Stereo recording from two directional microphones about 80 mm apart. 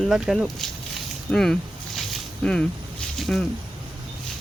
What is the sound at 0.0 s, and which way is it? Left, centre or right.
Speech, centre.